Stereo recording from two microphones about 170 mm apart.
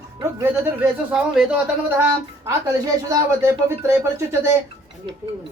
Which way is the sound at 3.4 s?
15° right (ahead or behind).